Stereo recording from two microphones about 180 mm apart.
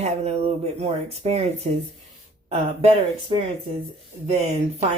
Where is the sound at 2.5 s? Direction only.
35° right (ahead or behind).